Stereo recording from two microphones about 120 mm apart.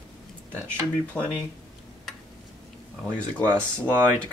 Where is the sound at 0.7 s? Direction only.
10° left (ahead or behind).